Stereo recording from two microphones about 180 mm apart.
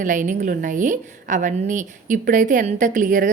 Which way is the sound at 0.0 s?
45° right (ahead or behind).